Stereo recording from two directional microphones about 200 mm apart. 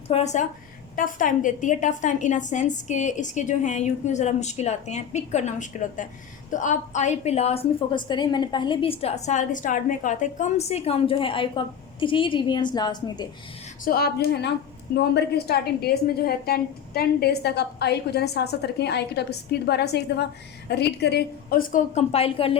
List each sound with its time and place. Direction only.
0.1 s a woman's voice: 35° left (ahead or behind)
13.8 s a woman's voice: 50° left (ahead or behind); by 22.5 s 30° left (ahead or behind)